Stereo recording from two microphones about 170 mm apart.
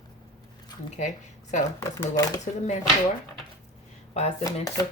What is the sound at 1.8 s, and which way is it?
Speech, 20° left (ahead or behind).